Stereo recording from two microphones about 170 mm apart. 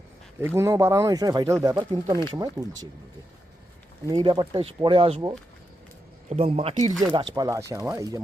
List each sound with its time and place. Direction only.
0.3 s speech: 15° right (ahead or behind)
4.0 s speech: 30° right (ahead or behind)
6.2 s speech: 40° right (ahead or behind)
7.3 s speech: 20° right (ahead or behind)